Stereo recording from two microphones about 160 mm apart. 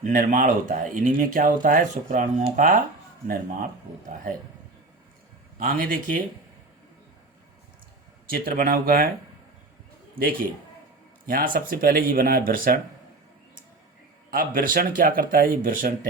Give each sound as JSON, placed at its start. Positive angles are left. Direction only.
{"t": 0.0, "sound": "speech", "side_deg": -55}
{"t": 5.5, "sound": "speech", "side_deg": -60}
{"t": 8.3, "sound": "speech", "side_deg": -65}
{"t": 10.2, "sound": "a man's voice", "side_deg": -35}
{"t": 11.3, "sound": "speech", "side_deg": -65}
{"t": 14.3, "sound": "speech", "side_deg": -60}